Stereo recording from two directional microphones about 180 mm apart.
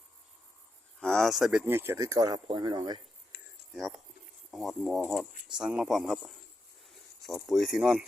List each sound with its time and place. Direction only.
0.9 s speech: centre (ahead or behind); by 3.0 s 25° right (ahead or behind)
3.3 s a sound: 60° left (ahead or behind)
3.8 s speech: centre (ahead or behind)